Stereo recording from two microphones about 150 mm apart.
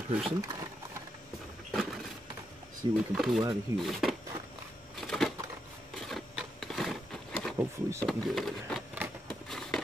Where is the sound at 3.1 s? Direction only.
Centre (ahead or behind).